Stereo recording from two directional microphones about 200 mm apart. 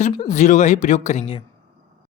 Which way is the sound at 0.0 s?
35° left (ahead or behind).